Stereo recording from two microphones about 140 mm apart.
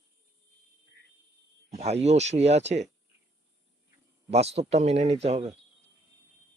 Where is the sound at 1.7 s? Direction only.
50° right (ahead or behind).